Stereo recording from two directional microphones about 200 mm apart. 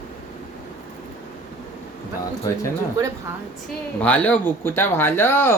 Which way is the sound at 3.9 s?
5° left (ahead or behind).